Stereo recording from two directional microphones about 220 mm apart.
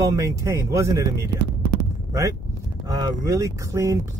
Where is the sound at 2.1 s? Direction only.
15° right (ahead or behind).